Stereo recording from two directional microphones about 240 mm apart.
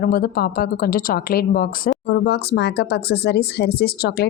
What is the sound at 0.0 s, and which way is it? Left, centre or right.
Speech, left.